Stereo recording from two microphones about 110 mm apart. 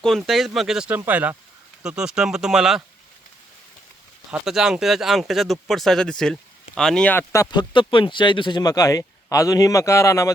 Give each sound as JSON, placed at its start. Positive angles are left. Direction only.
{"t": 0.0, "sound": "speech", "side_deg": 0}
{"t": 0.9, "sound": "speech", "side_deg": -15}
{"t": 4.3, "sound": "speech", "side_deg": -5}
{"t": 7.1, "sound": "speech", "side_deg": 20}
{"t": 7.5, "sound": "speech", "side_deg": 45}